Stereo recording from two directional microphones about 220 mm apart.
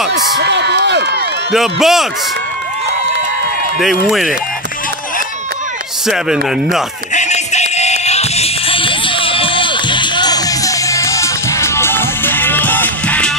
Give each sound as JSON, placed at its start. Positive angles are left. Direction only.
{"t": 0.1, "sound": "a sound", "side_deg": -50}
{"t": 1.5, "sound": "speech", "side_deg": 0}
{"t": 3.8, "sound": "speech", "side_deg": 0}
{"t": 6.0, "sound": "speech", "side_deg": 0}
{"t": 7.2, "sound": "music", "side_deg": 30}